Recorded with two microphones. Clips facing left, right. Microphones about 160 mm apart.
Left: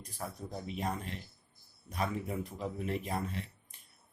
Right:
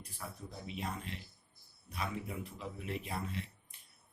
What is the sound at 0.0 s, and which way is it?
Speech, 40° left (ahead or behind).